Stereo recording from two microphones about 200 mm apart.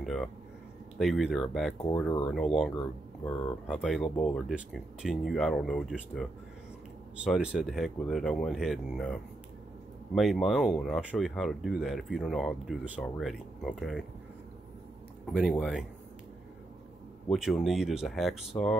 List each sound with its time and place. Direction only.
0.0 s speech: centre (ahead or behind)
2.0 s speech: 20° left (ahead or behind)
2.3 s speech: centre (ahead or behind)
7.2 s speech: centre (ahead or behind)
15.2 s speech: centre (ahead or behind)
17.3 s speech: centre (ahead or behind)